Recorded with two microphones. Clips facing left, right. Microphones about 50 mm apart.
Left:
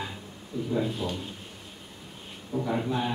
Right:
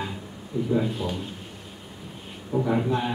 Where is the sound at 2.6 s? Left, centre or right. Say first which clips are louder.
Right 4 dB; centre.